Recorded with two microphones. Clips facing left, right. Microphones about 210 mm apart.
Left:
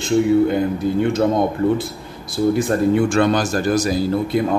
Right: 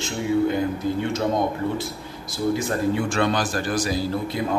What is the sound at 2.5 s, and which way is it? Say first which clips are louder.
A man's voice: left 7 dB; 50° left (ahead or behind).